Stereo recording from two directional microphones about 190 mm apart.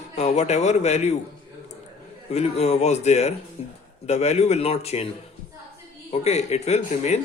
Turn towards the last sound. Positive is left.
turn(degrees=35)  # may be behind; listen again after turning